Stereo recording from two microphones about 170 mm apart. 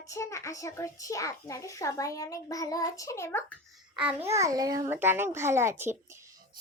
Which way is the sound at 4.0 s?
10° right (ahead or behind).